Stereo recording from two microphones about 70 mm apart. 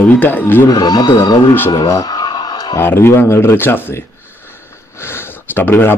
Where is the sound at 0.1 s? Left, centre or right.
Left.